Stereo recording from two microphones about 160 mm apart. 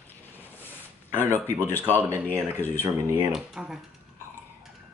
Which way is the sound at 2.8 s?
15° right (ahead or behind).